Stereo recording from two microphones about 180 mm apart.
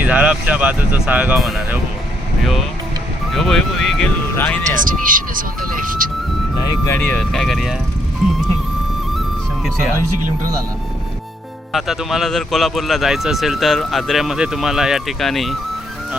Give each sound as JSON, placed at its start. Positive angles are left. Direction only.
{"t": 0.0, "sound": "speech", "side_deg": -10}
{"t": 3.3, "sound": "speech", "side_deg": 0}
{"t": 4.7, "sound": "speech", "side_deg": -50}
{"t": 6.8, "sound": "speech", "side_deg": 10}
{"t": 11.7, "sound": "speech", "side_deg": 0}